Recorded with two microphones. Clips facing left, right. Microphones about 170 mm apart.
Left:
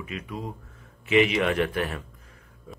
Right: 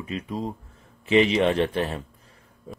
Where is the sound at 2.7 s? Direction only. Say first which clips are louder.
Right 4 dB; 35° right (ahead or behind).